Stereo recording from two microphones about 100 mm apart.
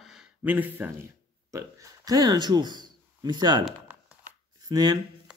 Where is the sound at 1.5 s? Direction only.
30° right (ahead or behind).